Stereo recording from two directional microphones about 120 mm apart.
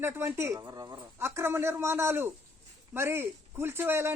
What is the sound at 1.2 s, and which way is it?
Speech, 20° right (ahead or behind).